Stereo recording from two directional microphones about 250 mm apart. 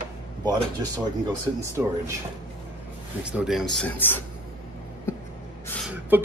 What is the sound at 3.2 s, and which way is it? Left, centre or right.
Speech, centre.